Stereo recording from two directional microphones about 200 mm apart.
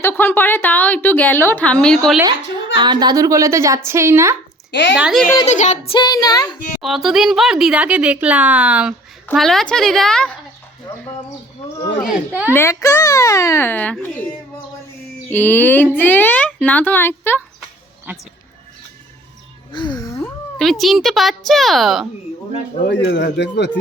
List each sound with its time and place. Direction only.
0.0 s a woman's voice: 10° left (ahead or behind)
2.7 s a woman's voice: 20° right (ahead or behind)
4.7 s a woman's voice: 60° left (ahead or behind)
4.9 s speech: centre (ahead or behind)
5.5 s child singing: 35° left (ahead or behind); by 6.5 s 20° left (ahead or behind)
6.8 s speech: centre (ahead or behind)
12.0 s a woman's voice: 10° right (ahead or behind)
12.5 s a woman's voice: 15° left (ahead or behind)
15.3 s a woman's voice: 10° left (ahead or behind)
19.7 s music: 20° left (ahead or behind)
20.2 s speech: centre (ahead or behind)
22.9 s speech: 60° left (ahead or behind)